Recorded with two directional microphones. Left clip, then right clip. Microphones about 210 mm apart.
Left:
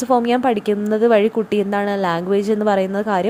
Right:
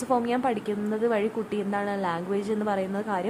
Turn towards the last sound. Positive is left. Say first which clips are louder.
# left 10 dB
turn(degrees=30)  # may be behind; listen again after turning